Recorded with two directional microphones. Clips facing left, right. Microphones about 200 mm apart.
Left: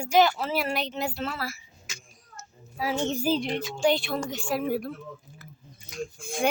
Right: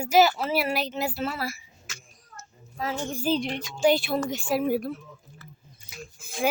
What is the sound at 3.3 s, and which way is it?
Speech, centre (ahead or behind).